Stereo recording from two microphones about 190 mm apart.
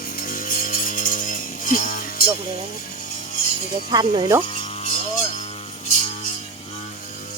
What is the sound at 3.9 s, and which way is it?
Speech, 20° right (ahead or behind).